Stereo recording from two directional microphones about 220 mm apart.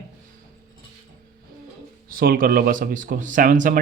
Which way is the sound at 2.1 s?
40° right (ahead or behind).